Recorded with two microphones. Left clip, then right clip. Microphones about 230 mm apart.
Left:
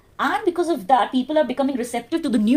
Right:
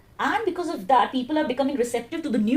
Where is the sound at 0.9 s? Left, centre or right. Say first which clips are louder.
Left 1 dB; left.